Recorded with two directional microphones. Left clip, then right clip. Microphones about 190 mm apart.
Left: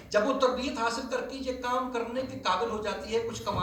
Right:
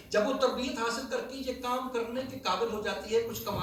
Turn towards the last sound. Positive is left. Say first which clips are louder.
# right 1 dB
turn(degrees=-30)  # may be behind; listen again after turning